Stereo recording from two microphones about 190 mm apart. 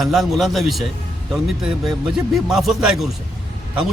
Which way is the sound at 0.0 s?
Centre (ahead or behind).